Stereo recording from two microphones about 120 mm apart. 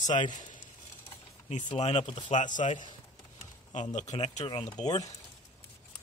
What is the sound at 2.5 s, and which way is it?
Speech, 90° left.